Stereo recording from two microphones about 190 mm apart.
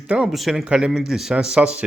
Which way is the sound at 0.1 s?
5° right (ahead or behind).